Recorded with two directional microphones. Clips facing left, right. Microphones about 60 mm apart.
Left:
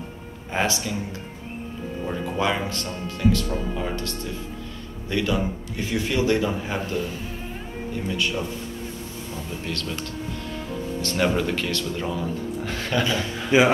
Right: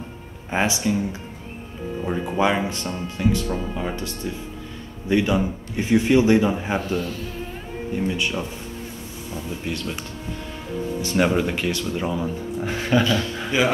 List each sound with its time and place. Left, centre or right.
0.5 s speech: centre
2.0 s speech: centre
3.5 s speech: centre
5.0 s a man's voice: right
9.5 s speech: centre
13.0 s speech: left